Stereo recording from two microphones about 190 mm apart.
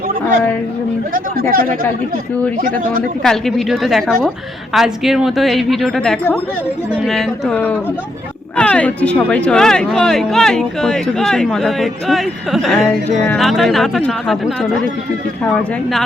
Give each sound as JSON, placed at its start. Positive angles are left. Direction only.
{"t": 1.1, "sound": "speech", "side_deg": -50}
{"t": 3.2, "sound": "speech", "side_deg": 0}